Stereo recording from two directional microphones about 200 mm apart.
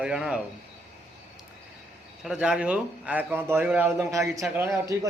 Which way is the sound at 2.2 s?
5° right (ahead or behind).